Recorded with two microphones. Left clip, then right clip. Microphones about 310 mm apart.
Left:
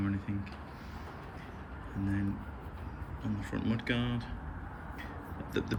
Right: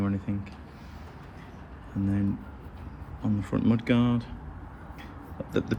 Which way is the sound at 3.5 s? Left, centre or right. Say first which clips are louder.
Right 9 dB; right.